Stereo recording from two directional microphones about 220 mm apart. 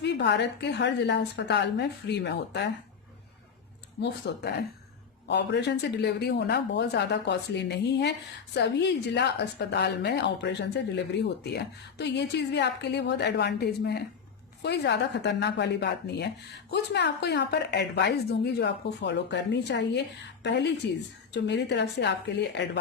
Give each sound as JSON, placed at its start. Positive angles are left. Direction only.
{"t": 0.0, "sound": "a woman's voice", "side_deg": 50}
{"t": 4.0, "sound": "a woman's voice", "side_deg": 50}